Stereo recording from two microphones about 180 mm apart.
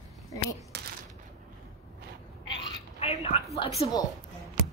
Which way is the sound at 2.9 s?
35° left (ahead or behind).